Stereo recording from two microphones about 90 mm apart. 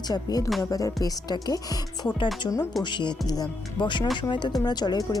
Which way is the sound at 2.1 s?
60° left (ahead or behind).